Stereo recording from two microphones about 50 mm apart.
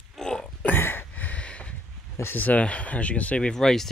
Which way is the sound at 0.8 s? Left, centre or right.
Left.